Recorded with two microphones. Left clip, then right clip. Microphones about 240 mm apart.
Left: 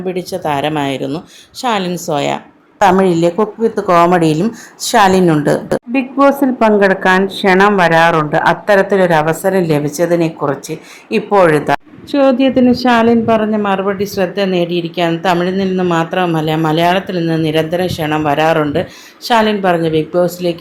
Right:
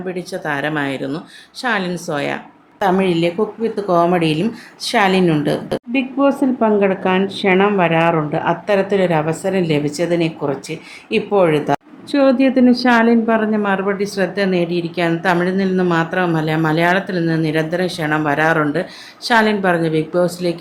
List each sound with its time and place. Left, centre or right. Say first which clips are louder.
0.1 s a woman's voice: left 5 dB; centre